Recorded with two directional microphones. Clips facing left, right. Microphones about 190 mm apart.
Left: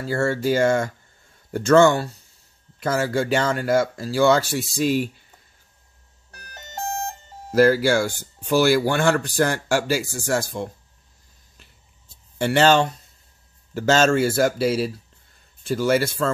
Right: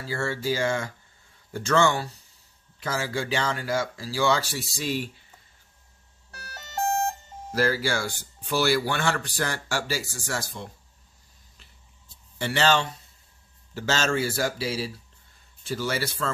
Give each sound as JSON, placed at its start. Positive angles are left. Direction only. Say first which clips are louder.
{"t": 0.0, "sound": "speech", "louder": "left 7 dB", "side_deg": 55}
{"t": 7.5, "sound": "speech", "louder": "left 9 dB", "side_deg": 50}
{"t": 12.4, "sound": "speech", "louder": "left 7 dB", "side_deg": 50}